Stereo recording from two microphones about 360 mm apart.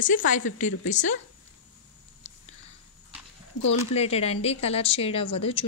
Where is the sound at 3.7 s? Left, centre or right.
Centre.